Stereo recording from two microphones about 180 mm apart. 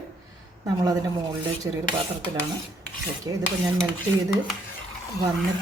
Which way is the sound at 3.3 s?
20° right (ahead or behind).